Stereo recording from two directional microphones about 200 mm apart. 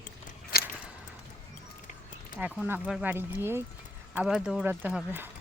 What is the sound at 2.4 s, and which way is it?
Speech, 10° right (ahead or behind).